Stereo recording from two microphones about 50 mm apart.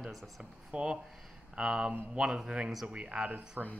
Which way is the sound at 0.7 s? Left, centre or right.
Centre.